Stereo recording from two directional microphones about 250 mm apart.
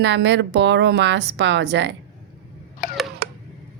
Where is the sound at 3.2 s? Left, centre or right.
Right.